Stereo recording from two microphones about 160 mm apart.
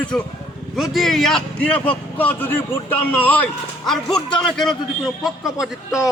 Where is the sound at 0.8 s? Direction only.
Centre (ahead or behind).